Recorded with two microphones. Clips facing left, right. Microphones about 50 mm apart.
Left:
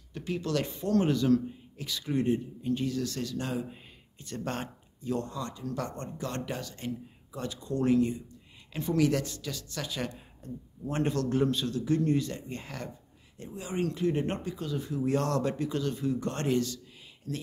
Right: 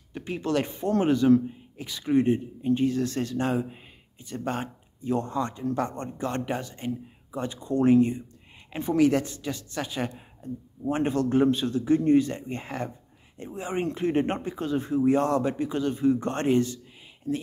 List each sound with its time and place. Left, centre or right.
0.1 s speech: right
3.7 s a sound: centre
5.0 s speech: right
15.0 s speech: centre